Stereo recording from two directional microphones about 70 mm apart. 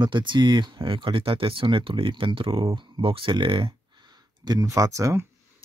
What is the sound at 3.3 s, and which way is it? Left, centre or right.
Speech, right.